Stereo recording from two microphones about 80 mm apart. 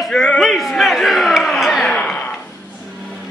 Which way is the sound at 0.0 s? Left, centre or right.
Centre.